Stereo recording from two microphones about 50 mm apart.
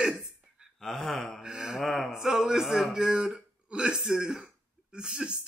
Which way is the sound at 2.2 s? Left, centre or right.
Centre.